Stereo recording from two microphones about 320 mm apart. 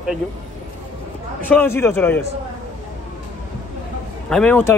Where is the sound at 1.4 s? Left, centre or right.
Centre.